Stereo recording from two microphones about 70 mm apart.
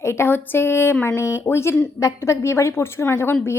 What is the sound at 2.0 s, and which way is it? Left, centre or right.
A woman's voice, left.